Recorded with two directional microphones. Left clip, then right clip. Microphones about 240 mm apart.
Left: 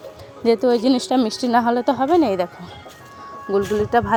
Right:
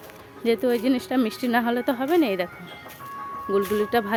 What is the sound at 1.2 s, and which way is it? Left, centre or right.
A woman's voice, centre.